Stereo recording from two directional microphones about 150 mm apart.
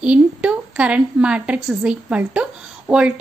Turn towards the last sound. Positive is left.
turn(degrees=-5)  # may be behind; listen again after turning